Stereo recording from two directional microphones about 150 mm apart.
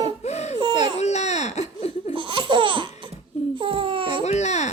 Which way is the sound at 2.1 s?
35° right (ahead or behind).